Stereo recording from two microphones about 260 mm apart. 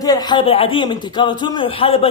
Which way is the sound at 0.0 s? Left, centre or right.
Centre.